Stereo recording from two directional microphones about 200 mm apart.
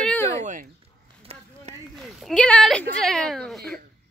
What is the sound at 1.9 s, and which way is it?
Speech, centre (ahead or behind).